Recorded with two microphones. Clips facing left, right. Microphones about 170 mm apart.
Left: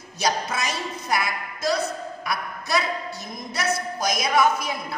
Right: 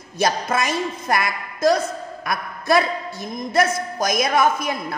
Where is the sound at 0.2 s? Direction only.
50° right (ahead or behind).